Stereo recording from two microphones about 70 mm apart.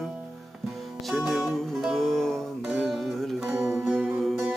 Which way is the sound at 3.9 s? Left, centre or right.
Centre.